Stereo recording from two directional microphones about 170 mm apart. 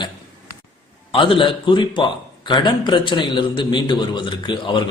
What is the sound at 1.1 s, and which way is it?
A man's voice, 30° left (ahead or behind).